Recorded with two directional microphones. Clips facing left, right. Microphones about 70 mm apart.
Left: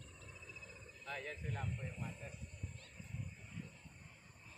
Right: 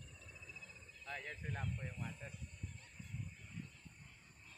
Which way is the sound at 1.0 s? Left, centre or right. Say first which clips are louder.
Left 1 dB; right.